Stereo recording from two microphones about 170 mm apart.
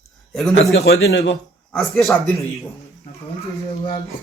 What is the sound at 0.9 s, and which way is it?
Speech, 85° left.